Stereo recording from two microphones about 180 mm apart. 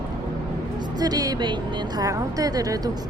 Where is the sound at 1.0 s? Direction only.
20° right (ahead or behind).